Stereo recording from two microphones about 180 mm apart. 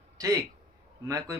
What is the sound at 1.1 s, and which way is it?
Speech, 15° right (ahead or behind).